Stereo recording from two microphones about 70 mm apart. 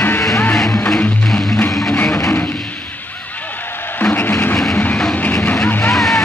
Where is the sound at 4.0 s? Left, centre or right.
Left.